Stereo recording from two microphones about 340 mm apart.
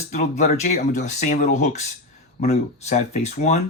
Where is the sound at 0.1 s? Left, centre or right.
Left.